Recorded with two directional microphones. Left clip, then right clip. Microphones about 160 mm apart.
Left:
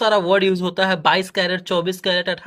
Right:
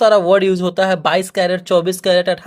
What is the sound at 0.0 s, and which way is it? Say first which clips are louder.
Speech: right 5 dB; 30° right (ahead or behind).